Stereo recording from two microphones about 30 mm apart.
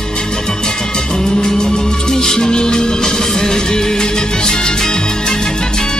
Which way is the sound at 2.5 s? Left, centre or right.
Left.